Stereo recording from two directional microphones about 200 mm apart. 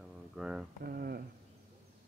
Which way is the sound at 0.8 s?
50° right (ahead or behind).